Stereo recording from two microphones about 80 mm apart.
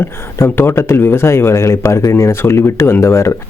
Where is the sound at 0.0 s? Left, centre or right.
Left.